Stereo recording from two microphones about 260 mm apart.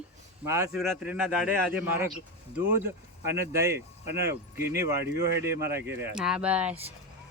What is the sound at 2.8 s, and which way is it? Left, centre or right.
A woman's voice, centre.